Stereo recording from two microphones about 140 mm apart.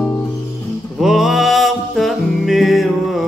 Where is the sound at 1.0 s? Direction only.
5° right (ahead or behind).